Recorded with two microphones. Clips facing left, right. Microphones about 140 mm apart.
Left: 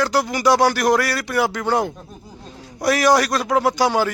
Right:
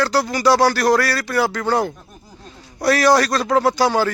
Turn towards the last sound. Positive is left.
turn(degrees=15)  # may be behind; listen again after turning